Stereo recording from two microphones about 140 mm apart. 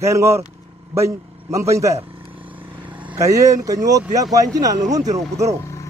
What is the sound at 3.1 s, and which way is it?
A man's voice, 25° right (ahead or behind).